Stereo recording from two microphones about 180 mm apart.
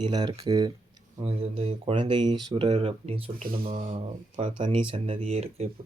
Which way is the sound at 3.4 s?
55° right (ahead or behind).